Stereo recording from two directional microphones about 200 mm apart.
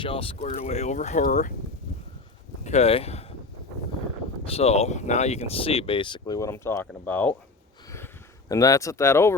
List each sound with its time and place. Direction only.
0.0 s speech: 25° left (ahead or behind)
2.6 s speech: 30° left (ahead or behind)
4.4 s speech: 30° left (ahead or behind); by 7.3 s 10° left (ahead or behind)
8.4 s speech: 15° left (ahead or behind)